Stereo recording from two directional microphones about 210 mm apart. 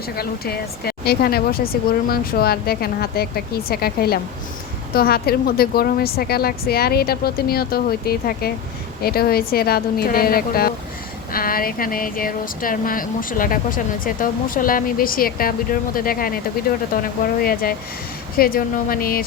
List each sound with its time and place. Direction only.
0.2 s a woman's voice: 45° left (ahead or behind)
17.4 s a woman's voice: 45° left (ahead or behind)